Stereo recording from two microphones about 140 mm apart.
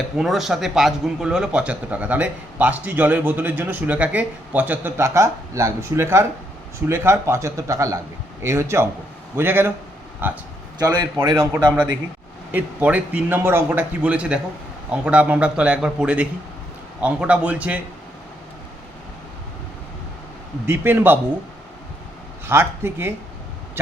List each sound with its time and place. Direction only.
0.2 s a man's voice: centre (ahead or behind)
10.8 s speech: 30° right (ahead or behind)
12.5 s a man's voice: 10° right (ahead or behind)
20.7 s a man's voice: 15° right (ahead or behind)
22.4 s a man's voice: 15° right (ahead or behind)